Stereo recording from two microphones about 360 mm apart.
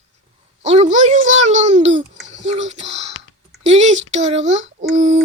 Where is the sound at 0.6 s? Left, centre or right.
Centre.